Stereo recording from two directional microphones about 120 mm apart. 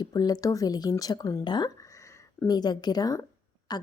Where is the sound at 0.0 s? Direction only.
35° left (ahead or behind).